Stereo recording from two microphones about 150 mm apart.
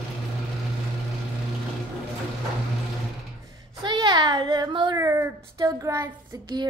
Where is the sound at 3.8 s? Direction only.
30° right (ahead or behind).